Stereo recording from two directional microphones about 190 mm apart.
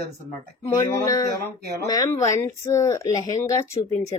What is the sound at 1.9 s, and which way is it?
Speech, 15° left (ahead or behind).